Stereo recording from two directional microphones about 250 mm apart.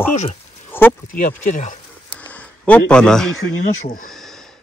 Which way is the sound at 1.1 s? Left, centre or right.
Left.